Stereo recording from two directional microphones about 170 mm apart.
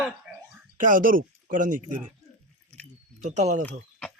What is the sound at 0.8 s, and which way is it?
Speech, 50° right (ahead or behind).